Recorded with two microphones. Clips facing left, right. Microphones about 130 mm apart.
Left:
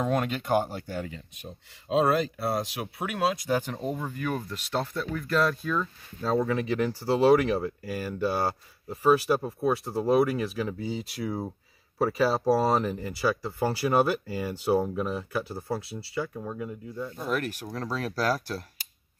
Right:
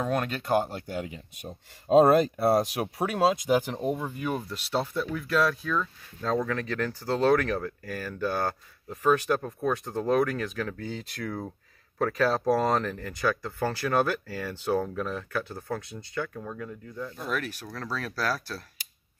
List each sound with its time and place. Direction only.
0.0 s speech: 10° left (ahead or behind)
0.9 s speech: 15° right (ahead or behind)
1.9 s speech: 45° right (ahead or behind)
3.4 s speech: 15° right (ahead or behind); by 18.6 s 20° left (ahead or behind)